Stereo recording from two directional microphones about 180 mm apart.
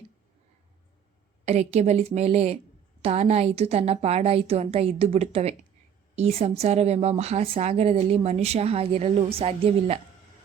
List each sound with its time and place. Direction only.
1.5 s a woman's voice: 35° right (ahead or behind)